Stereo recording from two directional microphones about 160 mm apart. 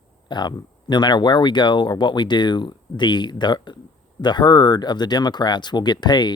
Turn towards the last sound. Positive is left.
turn(degrees=25)  # may be behind; listen again after turning